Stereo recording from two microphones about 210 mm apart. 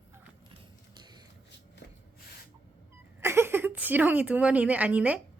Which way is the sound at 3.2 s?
10° right (ahead or behind).